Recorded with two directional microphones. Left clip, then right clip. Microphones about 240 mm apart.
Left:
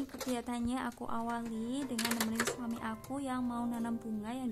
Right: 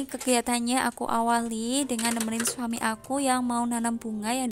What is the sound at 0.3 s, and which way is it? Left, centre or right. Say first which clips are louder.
Speech: right 14 dB; right.